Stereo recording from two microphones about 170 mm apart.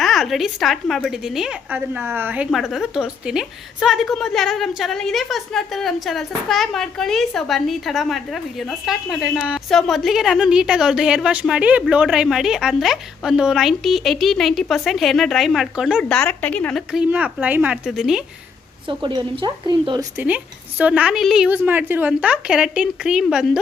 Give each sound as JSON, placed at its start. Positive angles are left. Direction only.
{"t": 0.0, "sound": "a woman's voice", "side_deg": 0}
{"t": 18.9, "sound": "speech", "side_deg": -30}
{"t": 20.1, "sound": "a woman's voice", "side_deg": -10}